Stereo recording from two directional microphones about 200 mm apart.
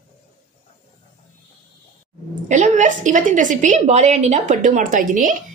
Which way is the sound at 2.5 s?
35° right (ahead or behind).